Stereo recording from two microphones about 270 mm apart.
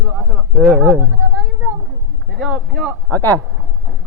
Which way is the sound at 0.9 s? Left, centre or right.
Centre.